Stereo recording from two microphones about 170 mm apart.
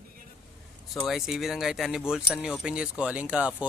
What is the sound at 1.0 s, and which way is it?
Speech, centre (ahead or behind).